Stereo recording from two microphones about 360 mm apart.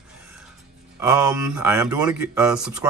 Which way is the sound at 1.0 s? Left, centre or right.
Centre.